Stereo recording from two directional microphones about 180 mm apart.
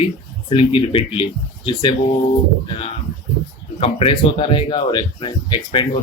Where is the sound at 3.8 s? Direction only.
30° left (ahead or behind).